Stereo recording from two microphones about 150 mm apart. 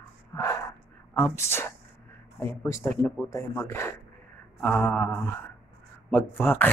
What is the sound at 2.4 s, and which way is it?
A man's voice, 15° left (ahead or behind).